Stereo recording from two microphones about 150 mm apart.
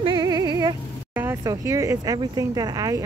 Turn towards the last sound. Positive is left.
turn(degrees=-25)  # may be behind; listen again after turning